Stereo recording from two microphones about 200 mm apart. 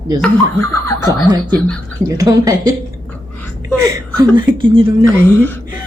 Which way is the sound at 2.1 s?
15° right (ahead or behind).